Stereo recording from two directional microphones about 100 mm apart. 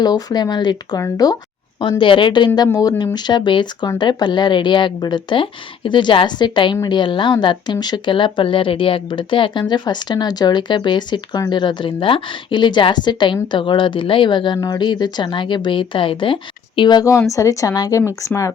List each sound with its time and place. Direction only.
0.0 s speech: 40° left (ahead or behind)
1.8 s speech: 55° left (ahead or behind)
2.7 s speech: 40° left (ahead or behind)
17.0 s speech: 30° left (ahead or behind)